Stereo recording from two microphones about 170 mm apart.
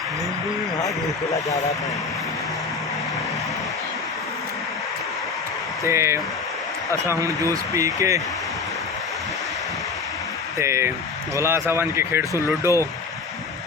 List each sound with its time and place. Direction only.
1.3 s speech: 20° left (ahead or behind)
5.8 s speech: 15° right (ahead or behind)
10.6 s speech: 15° right (ahead or behind)